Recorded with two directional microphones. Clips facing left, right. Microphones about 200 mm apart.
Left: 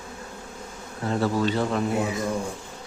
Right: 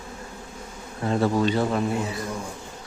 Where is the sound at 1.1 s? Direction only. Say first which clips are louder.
Right 2 dB; 20° right (ahead or behind).